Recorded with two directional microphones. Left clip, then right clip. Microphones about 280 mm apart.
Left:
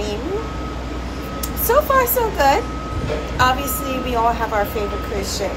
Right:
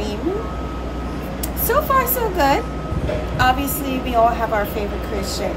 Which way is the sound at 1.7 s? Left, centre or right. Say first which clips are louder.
Left 2 dB; centre.